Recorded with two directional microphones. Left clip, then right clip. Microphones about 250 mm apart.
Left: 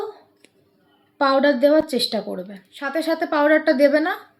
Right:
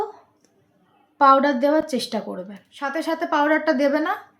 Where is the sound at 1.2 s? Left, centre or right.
Centre.